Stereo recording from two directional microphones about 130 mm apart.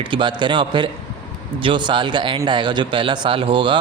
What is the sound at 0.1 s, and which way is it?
A man's voice, 35° right (ahead or behind).